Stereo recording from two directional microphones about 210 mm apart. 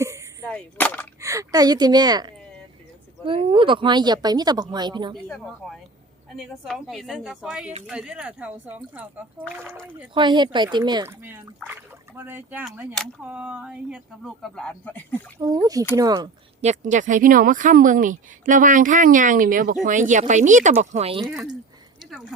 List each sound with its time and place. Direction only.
0.4 s gunshot: 5° left (ahead or behind)
1.2 s speech: 15° right (ahead or behind)
5.6 s speech: centre (ahead or behind)
10.2 s speech: 20° right (ahead or behind); by 15.2 s 10° left (ahead or behind)
15.4 s speech: 20° right (ahead or behind)
16.6 s speech: 35° right (ahead or behind)
21.2 s speech: centre (ahead or behind)